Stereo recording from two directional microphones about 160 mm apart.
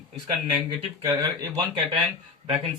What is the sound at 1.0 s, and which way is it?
Speech, 20° right (ahead or behind).